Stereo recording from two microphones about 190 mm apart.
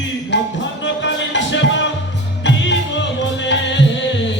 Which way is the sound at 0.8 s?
70° left (ahead or behind).